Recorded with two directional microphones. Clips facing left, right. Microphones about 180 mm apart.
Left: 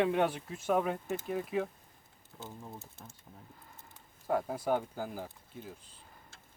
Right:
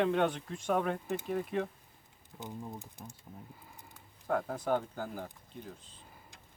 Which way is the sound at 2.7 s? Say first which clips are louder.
Right 3 dB; 15° right (ahead or behind).